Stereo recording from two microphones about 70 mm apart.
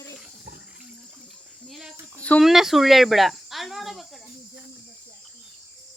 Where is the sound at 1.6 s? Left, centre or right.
Centre.